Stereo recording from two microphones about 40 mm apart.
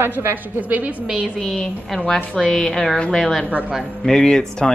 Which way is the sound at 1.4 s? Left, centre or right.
Centre.